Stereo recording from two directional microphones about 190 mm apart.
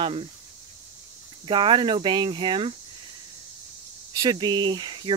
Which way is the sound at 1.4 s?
25° right (ahead or behind).